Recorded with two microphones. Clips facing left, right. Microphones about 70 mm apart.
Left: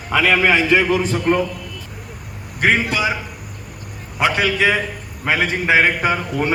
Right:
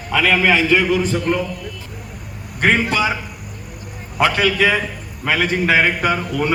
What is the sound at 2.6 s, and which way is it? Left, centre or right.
Speech, centre.